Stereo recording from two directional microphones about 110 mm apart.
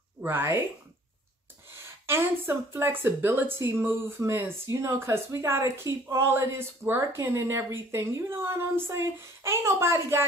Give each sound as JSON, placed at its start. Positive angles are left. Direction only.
{"t": 0.2, "sound": "speech", "side_deg": -20}
{"t": 2.0, "sound": "speech", "side_deg": -20}